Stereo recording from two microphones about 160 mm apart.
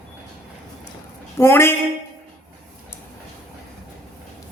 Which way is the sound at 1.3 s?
15° left (ahead or behind).